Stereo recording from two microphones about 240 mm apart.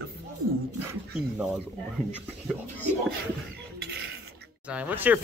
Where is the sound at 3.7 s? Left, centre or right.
Right.